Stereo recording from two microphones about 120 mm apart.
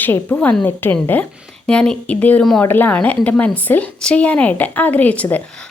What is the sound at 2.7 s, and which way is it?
Speech, 15° left (ahead or behind).